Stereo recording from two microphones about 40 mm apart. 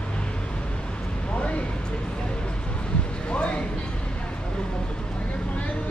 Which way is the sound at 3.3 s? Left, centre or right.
Left.